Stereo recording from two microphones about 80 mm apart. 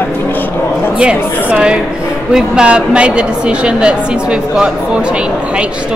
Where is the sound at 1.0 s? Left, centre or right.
Centre.